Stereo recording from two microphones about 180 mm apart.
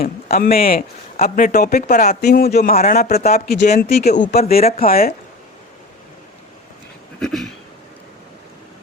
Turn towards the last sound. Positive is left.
turn(degrees=0)  # may be behind; listen again after turning